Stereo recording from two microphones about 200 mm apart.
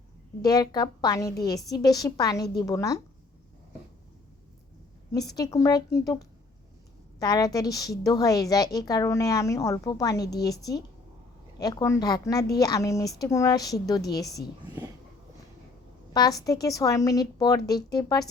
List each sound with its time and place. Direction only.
0.4 s a woman's voice: 20° left (ahead or behind)
5.4 s a woman's voice: 15° left (ahead or behind)
7.2 s a woman's voice: 20° left (ahead or behind)
16.1 s a woman's voice: 20° left (ahead or behind)